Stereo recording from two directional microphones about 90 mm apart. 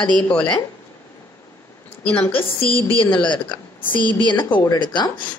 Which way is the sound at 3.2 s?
65° left (ahead or behind).